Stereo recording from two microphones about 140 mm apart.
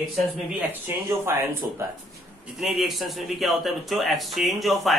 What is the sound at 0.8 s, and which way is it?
Speech, 15° right (ahead or behind).